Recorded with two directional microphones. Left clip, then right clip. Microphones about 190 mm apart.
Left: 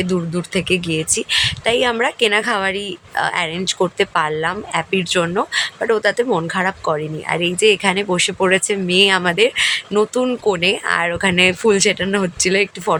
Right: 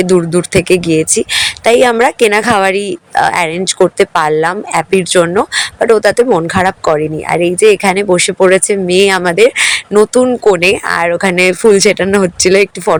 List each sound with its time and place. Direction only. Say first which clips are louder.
0.0 s speech: right 11 dB; 35° right (ahead or behind)